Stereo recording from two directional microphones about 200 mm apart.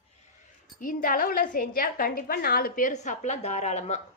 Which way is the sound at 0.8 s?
45° left (ahead or behind).